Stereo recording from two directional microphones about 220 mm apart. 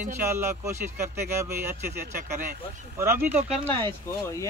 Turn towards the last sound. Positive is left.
turn(degrees=-20)  # may be behind; listen again after turning